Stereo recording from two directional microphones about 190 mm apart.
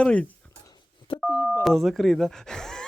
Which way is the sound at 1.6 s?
Centre (ahead or behind).